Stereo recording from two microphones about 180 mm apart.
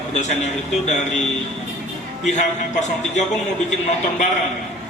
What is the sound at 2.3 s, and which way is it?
Speech, 40° left (ahead or behind).